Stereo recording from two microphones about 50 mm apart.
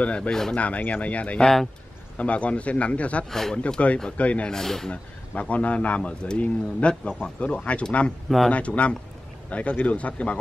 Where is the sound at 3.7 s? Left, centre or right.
Left.